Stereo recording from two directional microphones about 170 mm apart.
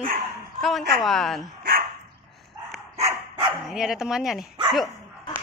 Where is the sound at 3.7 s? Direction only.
Centre (ahead or behind).